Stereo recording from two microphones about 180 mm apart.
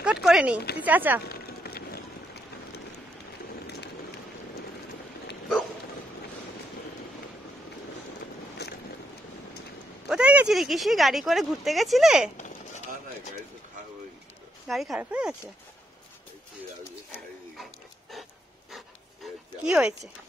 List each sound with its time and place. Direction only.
0.0 s speech: 5° right (ahead or behind)
0.6 s a woman's voice: 65° left (ahead or behind)
0.8 s speech: 10° right (ahead or behind)
1.2 s run: 60° left (ahead or behind)
8.6 s boat: 65° left (ahead or behind)
10.0 s speech: 5° right (ahead or behind)
12.4 s a sound: 40° left (ahead or behind)
14.7 s speech: centre (ahead or behind)
19.6 s speech: 5° right (ahead or behind)